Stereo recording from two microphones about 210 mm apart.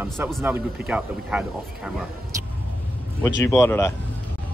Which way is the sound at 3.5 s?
15° left (ahead or behind).